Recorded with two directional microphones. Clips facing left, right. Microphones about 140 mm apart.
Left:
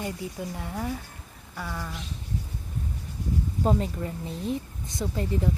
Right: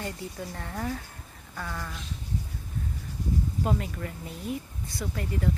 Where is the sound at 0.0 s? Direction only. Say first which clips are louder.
Left 3 dB; 15° left (ahead or behind).